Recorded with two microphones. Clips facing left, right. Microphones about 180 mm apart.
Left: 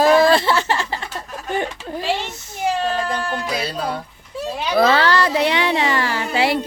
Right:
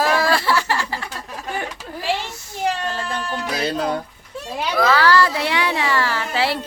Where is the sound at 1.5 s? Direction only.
20° left (ahead or behind).